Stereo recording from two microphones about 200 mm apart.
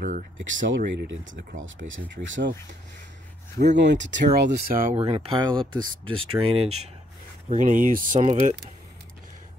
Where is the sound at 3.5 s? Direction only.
60° right (ahead or behind).